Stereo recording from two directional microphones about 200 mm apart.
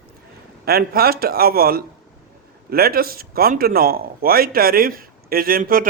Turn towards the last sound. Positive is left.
turn(degrees=-45)  # may be behind; listen again after turning